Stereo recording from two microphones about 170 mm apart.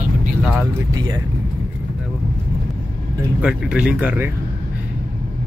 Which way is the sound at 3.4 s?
5° right (ahead or behind).